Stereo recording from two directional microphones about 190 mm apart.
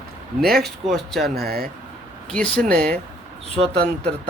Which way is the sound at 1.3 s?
55° right (ahead or behind).